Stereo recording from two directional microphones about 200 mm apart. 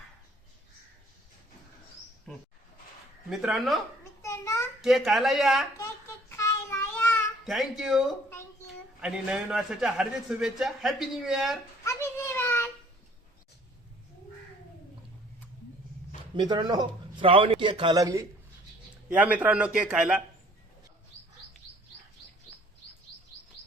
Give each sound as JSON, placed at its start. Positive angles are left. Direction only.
{"t": 2.3, "sound": "a man's voice", "side_deg": 5}
{"t": 4.2, "sound": "a sound", "side_deg": 15}
{"t": 4.8, "sound": "a man's voice", "side_deg": 0}
{"t": 6.1, "sound": "child singing", "side_deg": 15}
{"t": 7.4, "sound": "a man's voice", "side_deg": 0}
{"t": 11.9, "sound": "a sound", "side_deg": 15}
{"t": 16.3, "sound": "a man's voice", "side_deg": -20}